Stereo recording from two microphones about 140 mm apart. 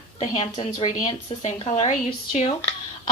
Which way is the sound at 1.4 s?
55° left (ahead or behind).